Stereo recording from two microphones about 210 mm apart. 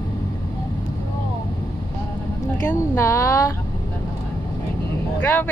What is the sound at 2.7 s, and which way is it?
Speech, 15° left (ahead or behind).